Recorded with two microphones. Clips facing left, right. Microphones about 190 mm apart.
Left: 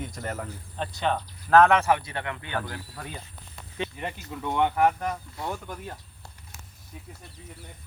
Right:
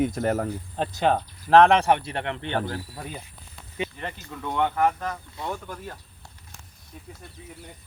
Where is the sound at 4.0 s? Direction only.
5° left (ahead or behind).